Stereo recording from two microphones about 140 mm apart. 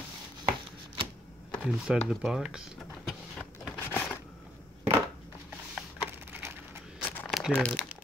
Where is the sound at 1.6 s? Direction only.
Centre (ahead or behind).